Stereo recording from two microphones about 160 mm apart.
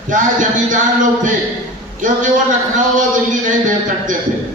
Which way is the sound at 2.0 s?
50° right (ahead or behind).